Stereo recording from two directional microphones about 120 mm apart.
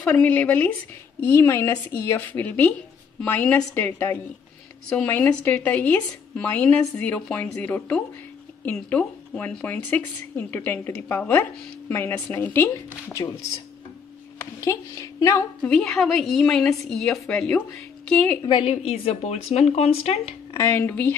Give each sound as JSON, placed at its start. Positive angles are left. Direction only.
{"t": 0.0, "sound": "a woman's voice", "side_deg": 10}
{"t": 14.4, "sound": "a woman's voice", "side_deg": 25}
{"t": 15.6, "sound": "a woman's voice", "side_deg": 10}
{"t": 18.7, "sound": "speech", "side_deg": 55}
{"t": 20.5, "sound": "a woman's voice", "side_deg": 20}